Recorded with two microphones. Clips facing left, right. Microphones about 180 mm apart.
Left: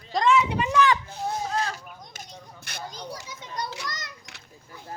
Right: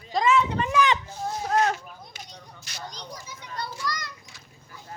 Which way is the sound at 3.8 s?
20° left (ahead or behind).